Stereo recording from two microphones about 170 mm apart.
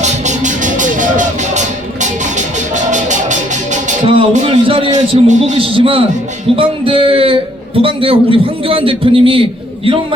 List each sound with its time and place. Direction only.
0.0 s music: 45° right (ahead or behind)
4.0 s a sound: 30° right (ahead or behind)
4.3 s a man's voice: 45° right (ahead or behind)